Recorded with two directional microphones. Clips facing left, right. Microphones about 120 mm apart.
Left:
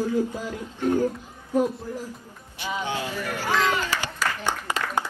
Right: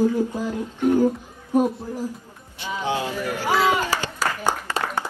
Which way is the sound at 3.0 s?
15° right (ahead or behind).